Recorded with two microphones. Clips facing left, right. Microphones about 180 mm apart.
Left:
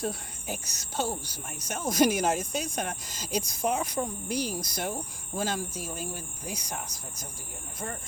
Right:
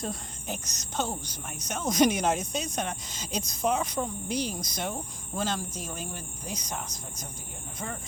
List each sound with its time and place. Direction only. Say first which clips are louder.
0.0 s speech: left 2 dB; 10° left (ahead or behind)